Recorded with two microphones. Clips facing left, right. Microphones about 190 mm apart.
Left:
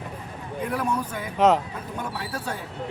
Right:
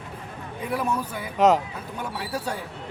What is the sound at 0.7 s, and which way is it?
Speech, 10° right (ahead or behind).